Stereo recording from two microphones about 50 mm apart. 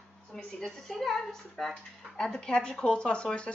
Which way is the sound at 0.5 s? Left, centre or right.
Centre.